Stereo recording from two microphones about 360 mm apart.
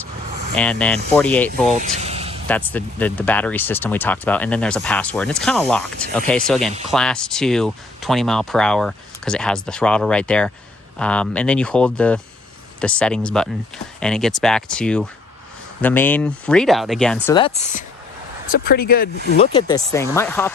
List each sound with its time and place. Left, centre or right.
0.5 s speech: centre
1.7 s vehicle: centre
2.5 s speech: centre; by 19.0 s left
19.3 s speech: centre